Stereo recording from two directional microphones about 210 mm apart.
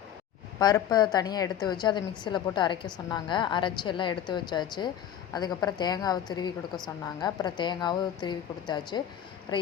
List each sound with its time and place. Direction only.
0.6 s a woman's voice: 20° left (ahead or behind)